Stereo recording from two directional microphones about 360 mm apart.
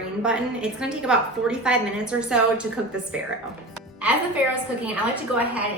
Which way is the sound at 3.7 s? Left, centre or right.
Centre.